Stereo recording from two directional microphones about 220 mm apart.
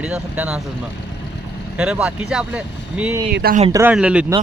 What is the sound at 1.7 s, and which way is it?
Speech, 5° right (ahead or behind).